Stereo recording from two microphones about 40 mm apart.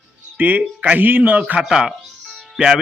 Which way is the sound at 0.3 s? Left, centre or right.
Right.